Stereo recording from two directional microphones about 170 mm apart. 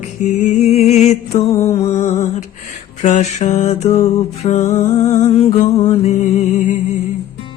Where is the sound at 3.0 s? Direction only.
45° left (ahead or behind).